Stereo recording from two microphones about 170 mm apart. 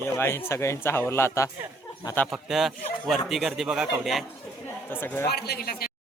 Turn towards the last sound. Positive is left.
turn(degrees=60)  # may be behind; listen again after turning